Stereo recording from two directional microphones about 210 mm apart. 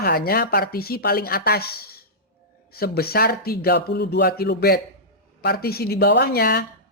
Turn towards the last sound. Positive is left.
turn(degrees=50)  # may be behind; listen again after turning